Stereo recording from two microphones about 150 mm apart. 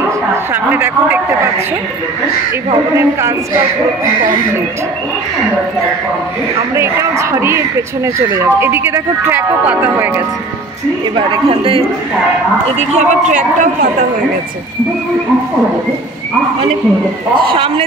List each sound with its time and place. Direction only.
0.7 s speech: 15° right (ahead or behind)
2.7 s speech: 20° right (ahead or behind)
6.7 s speech: 20° right (ahead or behind)
11.1 s a woman's voice: 35° right (ahead or behind)
12.7 s speech: 50° right (ahead or behind)
17.5 s a woman's voice: 35° right (ahead or behind)